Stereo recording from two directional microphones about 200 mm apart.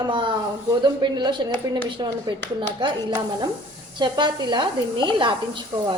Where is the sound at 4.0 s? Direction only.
20° right (ahead or behind).